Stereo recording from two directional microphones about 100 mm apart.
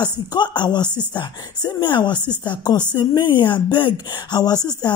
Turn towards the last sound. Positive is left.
turn(degrees=40)  # may be behind; listen again after turning